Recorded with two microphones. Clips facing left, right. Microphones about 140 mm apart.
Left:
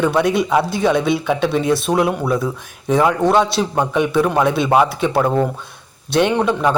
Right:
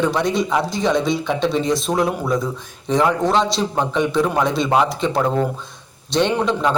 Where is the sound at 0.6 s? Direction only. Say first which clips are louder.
Left 3 dB; 60° left (ahead or behind).